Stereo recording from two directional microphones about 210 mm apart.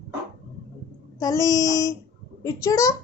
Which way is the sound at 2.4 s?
15° left (ahead or behind).